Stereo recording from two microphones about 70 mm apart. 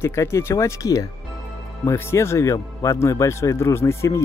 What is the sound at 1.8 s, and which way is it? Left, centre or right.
Speech, left.